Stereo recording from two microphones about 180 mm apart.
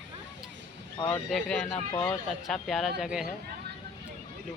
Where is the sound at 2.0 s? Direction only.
Centre (ahead or behind).